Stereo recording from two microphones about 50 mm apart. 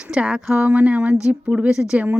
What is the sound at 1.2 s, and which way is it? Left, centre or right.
Speech, centre.